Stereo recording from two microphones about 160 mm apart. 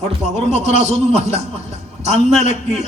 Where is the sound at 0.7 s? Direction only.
45° right (ahead or behind).